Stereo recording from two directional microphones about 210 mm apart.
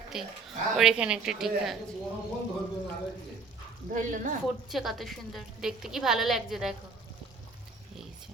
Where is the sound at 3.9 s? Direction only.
35° right (ahead or behind).